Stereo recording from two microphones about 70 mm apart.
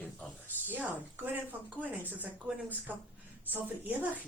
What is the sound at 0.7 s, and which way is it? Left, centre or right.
Speech, right.